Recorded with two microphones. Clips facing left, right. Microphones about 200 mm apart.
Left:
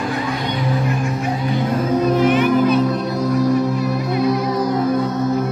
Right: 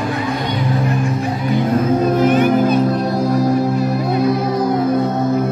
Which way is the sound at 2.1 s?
45° right (ahead or behind).